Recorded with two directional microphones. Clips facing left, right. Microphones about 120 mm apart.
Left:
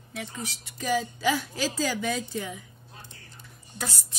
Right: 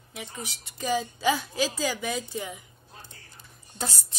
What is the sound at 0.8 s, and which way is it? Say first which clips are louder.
A woman's voice: even; 25° right (ahead or behind).